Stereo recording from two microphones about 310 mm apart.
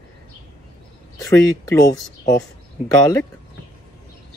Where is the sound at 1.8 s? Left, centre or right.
Centre.